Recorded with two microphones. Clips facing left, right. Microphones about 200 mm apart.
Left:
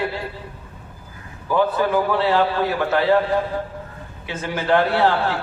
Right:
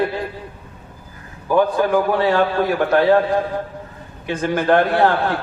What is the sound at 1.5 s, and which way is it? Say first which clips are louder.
A man's voice: right 3 dB; 50° right (ahead or behind).